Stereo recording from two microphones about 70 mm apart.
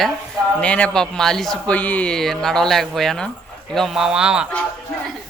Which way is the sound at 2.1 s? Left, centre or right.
Centre.